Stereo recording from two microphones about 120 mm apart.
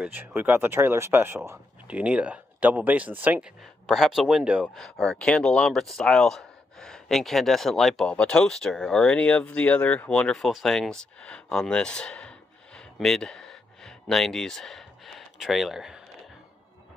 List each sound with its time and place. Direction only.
0.0 s speech: 15° right (ahead or behind)
1.9 s speech: 10° right (ahead or behind)
3.8 s speech: centre (ahead or behind)
4.7 s speech: 5° left (ahead or behind)